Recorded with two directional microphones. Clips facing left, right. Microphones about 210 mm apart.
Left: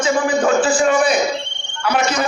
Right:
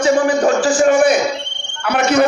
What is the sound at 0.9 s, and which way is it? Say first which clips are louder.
Speech: right 7 dB; 50° right (ahead or behind).